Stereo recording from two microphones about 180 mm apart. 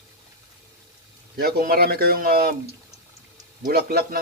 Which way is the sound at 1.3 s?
60° right (ahead or behind).